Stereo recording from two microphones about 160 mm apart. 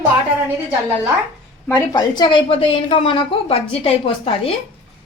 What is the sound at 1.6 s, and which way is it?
A woman's voice, 20° left (ahead or behind).